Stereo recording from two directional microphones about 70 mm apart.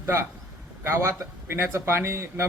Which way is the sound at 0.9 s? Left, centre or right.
Right.